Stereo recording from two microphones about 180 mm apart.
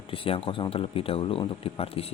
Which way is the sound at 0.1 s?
30° left (ahead or behind).